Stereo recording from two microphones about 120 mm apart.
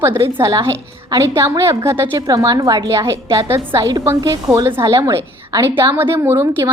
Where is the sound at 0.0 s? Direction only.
20° right (ahead or behind).